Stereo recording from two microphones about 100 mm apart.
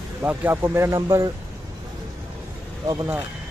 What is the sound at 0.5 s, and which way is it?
Speech, 25° right (ahead or behind).